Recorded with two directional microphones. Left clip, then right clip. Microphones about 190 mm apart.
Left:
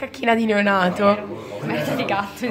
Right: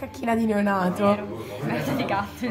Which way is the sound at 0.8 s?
Centre (ahead or behind).